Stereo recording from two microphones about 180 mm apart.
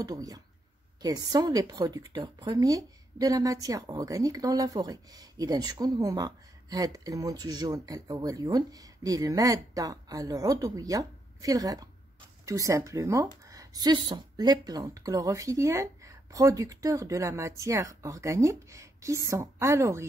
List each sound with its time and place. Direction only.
0.0 s a woman's voice: 20° right (ahead or behind)